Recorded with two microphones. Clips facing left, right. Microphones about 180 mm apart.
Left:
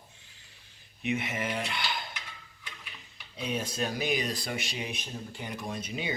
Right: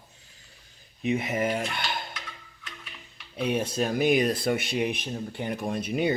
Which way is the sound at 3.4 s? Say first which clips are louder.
Right 6 dB; 60° right (ahead or behind).